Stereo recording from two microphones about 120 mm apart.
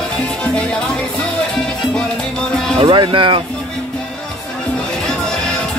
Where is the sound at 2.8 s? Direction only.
45° right (ahead or behind).